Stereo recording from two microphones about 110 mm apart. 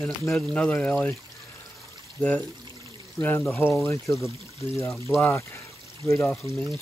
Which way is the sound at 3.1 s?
20° left (ahead or behind).